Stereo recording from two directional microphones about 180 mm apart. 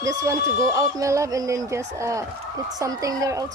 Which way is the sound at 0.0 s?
20° right (ahead or behind).